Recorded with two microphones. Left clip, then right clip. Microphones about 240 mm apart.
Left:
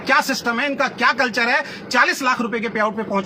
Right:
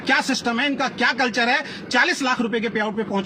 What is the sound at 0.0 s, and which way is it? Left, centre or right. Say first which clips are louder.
A man's voice: left 3 dB; left.